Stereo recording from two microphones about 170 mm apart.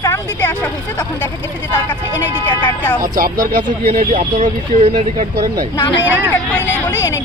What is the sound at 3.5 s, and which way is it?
Speech, 50° right (ahead or behind).